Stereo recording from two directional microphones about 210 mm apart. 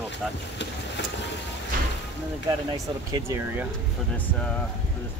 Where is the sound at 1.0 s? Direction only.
55° left (ahead or behind).